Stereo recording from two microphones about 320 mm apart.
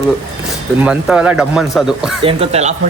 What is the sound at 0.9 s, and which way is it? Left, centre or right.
Speech, centre.